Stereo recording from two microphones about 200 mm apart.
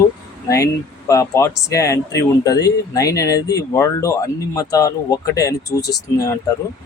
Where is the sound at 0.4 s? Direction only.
15° left (ahead or behind).